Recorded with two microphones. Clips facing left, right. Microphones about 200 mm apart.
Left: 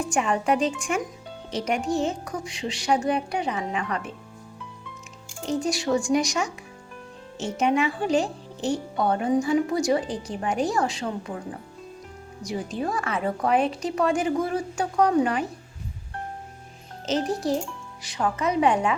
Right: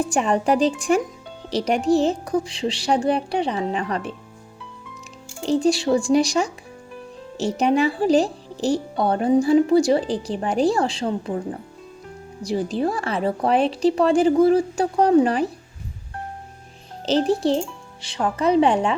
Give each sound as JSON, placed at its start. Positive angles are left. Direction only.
{"t": 0.0, "sound": "speech", "side_deg": -35}
{"t": 5.4, "sound": "speech", "side_deg": -30}
{"t": 12.4, "sound": "speech", "side_deg": -35}
{"t": 17.1, "sound": "speech", "side_deg": -30}